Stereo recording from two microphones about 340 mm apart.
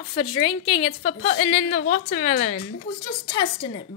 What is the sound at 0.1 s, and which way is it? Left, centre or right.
A woman's voice, centre.